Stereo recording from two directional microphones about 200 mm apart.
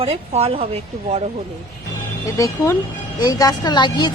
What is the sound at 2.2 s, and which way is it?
A woman's voice, 15° left (ahead or behind).